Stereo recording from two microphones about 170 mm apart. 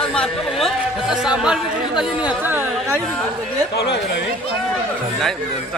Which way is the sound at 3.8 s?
90° left.